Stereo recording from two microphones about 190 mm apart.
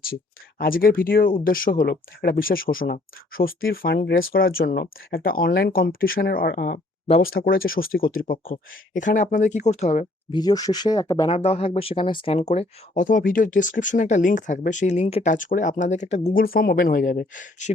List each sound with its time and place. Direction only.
0.6 s speech: 50° left (ahead or behind)
10.3 s speech: 20° left (ahead or behind)
11.3 s speech: 30° left (ahead or behind)